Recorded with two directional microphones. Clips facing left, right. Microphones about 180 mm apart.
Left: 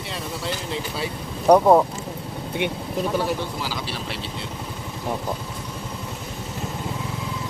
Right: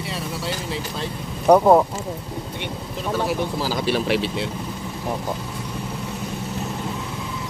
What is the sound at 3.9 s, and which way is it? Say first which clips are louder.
Speech: right 10 dB; 70° right (ahead or behind).